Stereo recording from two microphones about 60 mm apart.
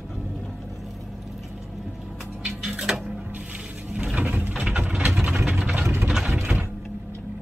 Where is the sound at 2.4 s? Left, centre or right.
Centre.